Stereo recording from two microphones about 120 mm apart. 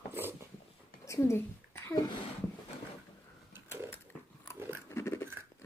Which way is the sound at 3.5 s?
20° right (ahead or behind).